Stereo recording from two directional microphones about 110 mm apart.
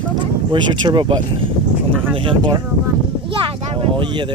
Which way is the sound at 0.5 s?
45° right (ahead or behind).